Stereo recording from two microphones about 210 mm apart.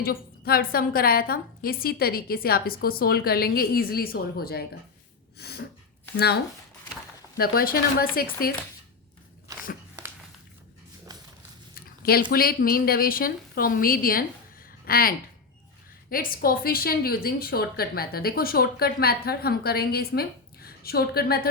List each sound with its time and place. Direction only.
0.0 s a woman's voice: 45° left (ahead or behind)
5.4 s a sound: 50° left (ahead or behind)
6.1 s a woman's voice: 50° left (ahead or behind)
11.1 s a sound: 20° right (ahead or behind)
11.7 s zipper: 45° left (ahead or behind)
12.3 s a woman's voice: 45° left (ahead or behind)